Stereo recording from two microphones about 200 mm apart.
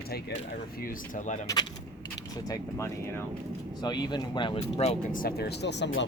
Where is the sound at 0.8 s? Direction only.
40° left (ahead or behind).